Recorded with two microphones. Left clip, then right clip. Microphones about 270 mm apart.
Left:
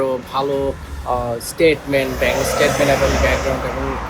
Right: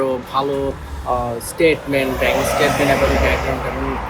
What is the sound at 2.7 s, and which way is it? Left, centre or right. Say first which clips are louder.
Speech: even; right.